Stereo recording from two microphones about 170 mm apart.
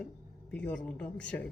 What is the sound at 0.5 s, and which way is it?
Speech, 5° left (ahead or behind).